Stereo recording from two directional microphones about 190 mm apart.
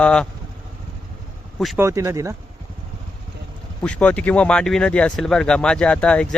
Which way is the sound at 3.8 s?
5° left (ahead or behind).